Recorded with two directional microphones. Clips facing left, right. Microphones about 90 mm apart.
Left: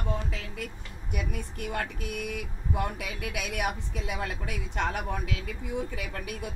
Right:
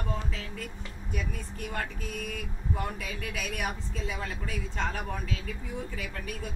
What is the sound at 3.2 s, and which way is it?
A woman's voice, 15° left (ahead or behind).